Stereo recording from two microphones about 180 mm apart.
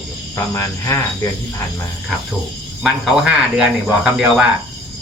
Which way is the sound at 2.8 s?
5° right (ahead or behind).